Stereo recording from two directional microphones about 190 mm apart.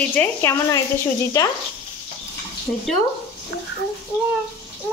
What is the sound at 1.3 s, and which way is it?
Speech, 20° left (ahead or behind).